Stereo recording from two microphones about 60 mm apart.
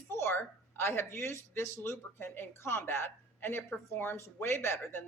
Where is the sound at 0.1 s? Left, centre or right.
Left.